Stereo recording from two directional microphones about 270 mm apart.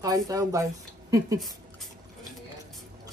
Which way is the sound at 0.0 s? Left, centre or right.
Centre.